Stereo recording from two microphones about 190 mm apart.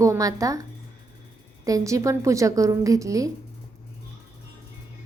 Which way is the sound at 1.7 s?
15° right (ahead or behind).